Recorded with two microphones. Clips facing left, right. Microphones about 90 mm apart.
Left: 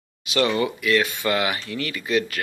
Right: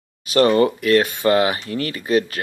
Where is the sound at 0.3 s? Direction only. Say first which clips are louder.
Right 7 dB; 40° right (ahead or behind).